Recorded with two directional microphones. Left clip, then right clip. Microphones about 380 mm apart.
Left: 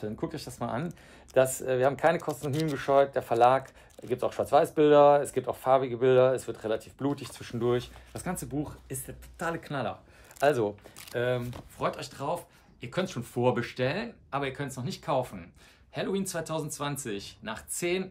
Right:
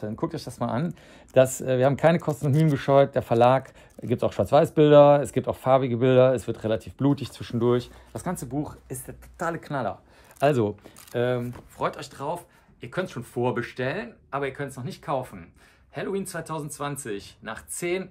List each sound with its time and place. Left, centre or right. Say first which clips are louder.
0.0 s speech: right 5 dB; centre
11.8 s speech: right 3 dB; centre